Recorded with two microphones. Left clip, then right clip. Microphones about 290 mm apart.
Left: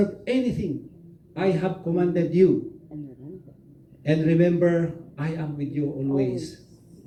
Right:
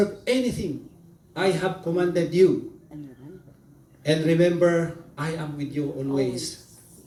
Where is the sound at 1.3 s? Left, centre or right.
Right.